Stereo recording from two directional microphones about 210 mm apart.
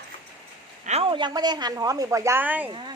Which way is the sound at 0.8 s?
30° right (ahead or behind).